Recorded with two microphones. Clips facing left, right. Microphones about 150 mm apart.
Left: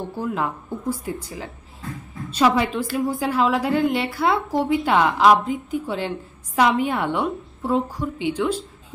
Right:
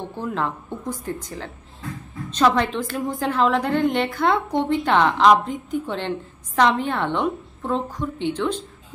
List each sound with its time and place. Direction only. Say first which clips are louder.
0.2 s a woman's voice: even; 5° left (ahead or behind)